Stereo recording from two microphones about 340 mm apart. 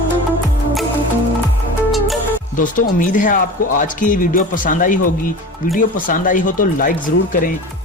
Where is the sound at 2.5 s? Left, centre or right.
Left.